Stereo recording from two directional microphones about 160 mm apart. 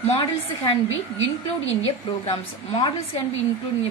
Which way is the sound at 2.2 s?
35° left (ahead or behind).